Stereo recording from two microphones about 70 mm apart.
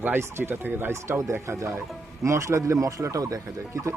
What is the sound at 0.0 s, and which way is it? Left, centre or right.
Speech, right.